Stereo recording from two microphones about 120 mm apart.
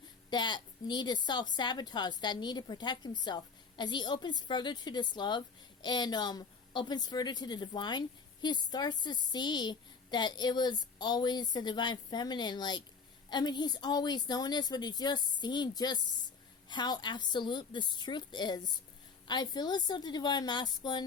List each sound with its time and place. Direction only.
0.3 s a woman's voice: 40° left (ahead or behind)